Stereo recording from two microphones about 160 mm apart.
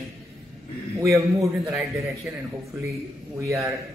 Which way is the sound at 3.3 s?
20° right (ahead or behind).